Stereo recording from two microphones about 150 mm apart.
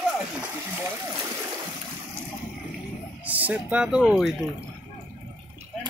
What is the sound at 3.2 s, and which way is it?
Speech, 10° right (ahead or behind).